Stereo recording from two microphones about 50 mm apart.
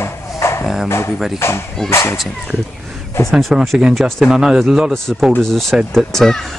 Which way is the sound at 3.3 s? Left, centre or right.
Centre.